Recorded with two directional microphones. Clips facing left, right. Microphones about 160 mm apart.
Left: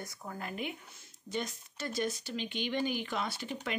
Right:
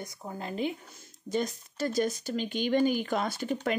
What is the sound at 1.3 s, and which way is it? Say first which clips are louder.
Speech: right 7 dB; 40° right (ahead or behind).